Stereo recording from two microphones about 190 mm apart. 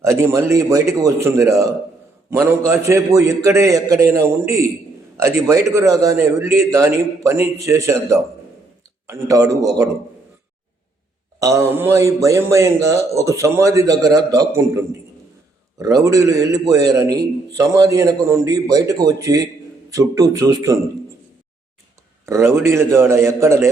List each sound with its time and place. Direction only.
0.0 s speech: 15° right (ahead or behind)
11.3 s a man's voice: 15° right (ahead or behind)
22.3 s speech: 15° right (ahead or behind)